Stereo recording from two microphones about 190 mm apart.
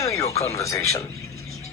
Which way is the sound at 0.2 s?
35° left (ahead or behind).